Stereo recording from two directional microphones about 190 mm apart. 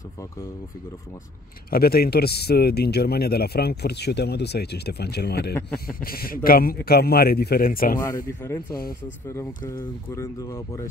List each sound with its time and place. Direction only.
1.7 s speech: 55° left (ahead or behind)
5.5 s speech: 10° left (ahead or behind)
5.9 s a man's voice: 50° left (ahead or behind)
8.4 s speech: 15° left (ahead or behind)